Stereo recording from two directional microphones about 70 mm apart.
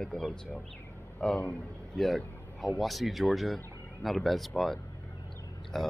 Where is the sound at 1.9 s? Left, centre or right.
Centre.